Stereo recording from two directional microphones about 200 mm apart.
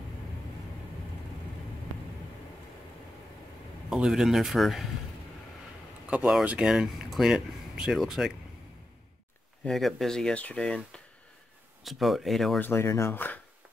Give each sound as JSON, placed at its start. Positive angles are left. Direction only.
{"t": 3.9, "sound": "speech", "side_deg": 0}
{"t": 6.0, "sound": "speech", "side_deg": -5}
{"t": 9.7, "sound": "speech", "side_deg": 0}